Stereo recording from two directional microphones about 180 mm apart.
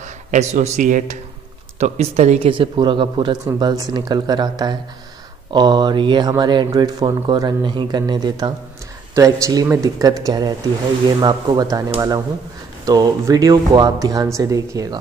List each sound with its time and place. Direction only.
0.0 s a man's voice: 40° right (ahead or behind); by 11.8 s 20° right (ahead or behind)
12.8 s speech: 20° right (ahead or behind)